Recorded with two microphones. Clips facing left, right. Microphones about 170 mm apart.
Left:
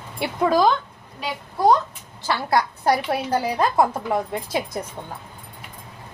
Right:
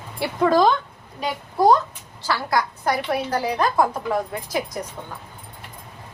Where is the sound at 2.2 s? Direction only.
25° left (ahead or behind).